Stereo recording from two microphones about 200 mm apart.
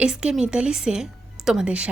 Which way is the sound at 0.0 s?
5° right (ahead or behind).